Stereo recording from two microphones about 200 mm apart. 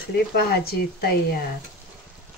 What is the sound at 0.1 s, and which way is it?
Speech, 50° left (ahead or behind).